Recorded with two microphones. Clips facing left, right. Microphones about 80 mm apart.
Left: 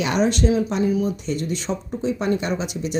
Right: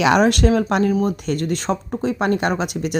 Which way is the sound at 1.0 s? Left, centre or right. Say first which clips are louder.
Right 3 dB; right.